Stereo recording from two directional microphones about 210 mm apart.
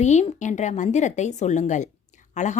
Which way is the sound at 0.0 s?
35° left (ahead or behind).